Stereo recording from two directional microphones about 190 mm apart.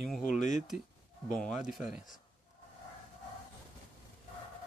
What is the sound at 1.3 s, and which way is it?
Speech, centre (ahead or behind).